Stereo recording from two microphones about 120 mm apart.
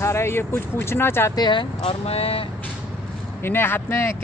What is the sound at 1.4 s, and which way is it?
Speech, 40° left (ahead or behind).